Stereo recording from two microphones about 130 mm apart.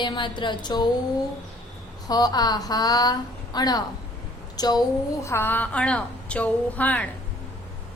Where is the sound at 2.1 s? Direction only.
30° left (ahead or behind).